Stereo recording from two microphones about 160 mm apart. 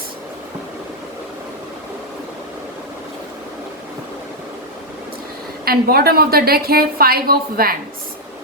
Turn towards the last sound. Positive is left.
turn(degrees=-65)  # may be behind; listen again after turning